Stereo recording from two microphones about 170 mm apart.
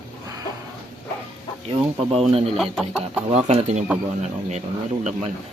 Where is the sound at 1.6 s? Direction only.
35° right (ahead or behind).